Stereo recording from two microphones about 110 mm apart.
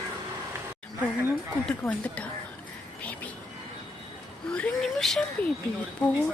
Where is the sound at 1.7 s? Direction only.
5° left (ahead or behind).